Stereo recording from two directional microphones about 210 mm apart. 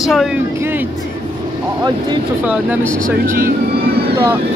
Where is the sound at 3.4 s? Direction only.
45° right (ahead or behind).